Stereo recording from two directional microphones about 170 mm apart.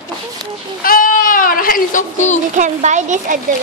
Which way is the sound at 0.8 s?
55° left (ahead or behind).